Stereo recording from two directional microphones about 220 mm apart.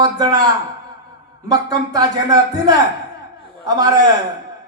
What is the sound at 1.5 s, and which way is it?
A woman's voice, 15° right (ahead or behind).